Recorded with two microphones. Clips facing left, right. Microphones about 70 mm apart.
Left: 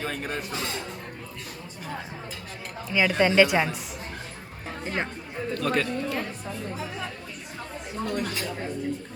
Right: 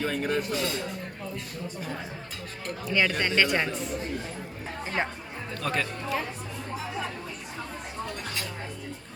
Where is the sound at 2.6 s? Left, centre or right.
Centre.